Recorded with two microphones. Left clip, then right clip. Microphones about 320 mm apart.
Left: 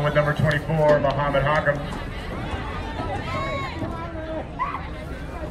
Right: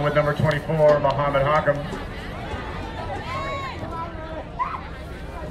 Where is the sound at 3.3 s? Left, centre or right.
Right.